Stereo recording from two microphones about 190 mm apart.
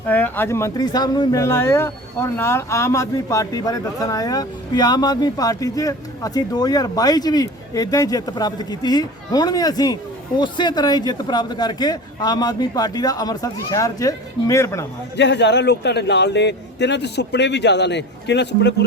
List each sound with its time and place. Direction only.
0.1 s speech: 10° left (ahead or behind)
15.1 s a man's voice: 65° left (ahead or behind)